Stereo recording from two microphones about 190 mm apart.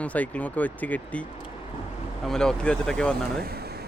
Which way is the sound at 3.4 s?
55° right (ahead or behind).